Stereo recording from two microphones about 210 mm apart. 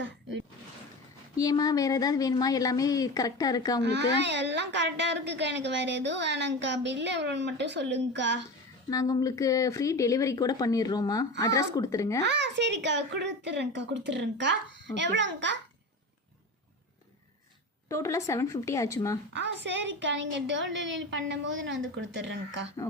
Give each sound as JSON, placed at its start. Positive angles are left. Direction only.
{"t": 1.4, "sound": "speech", "side_deg": 15}
{"t": 3.8, "sound": "a woman's voice", "side_deg": -55}
{"t": 8.9, "sound": "speech", "side_deg": 15}
{"t": 12.2, "sound": "a woman's voice", "side_deg": -55}
{"t": 17.8, "sound": "speech", "side_deg": 15}
{"t": 19.4, "sound": "a woman's voice", "side_deg": -55}